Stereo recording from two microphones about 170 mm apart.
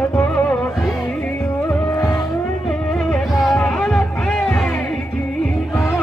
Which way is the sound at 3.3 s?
Centre (ahead or behind).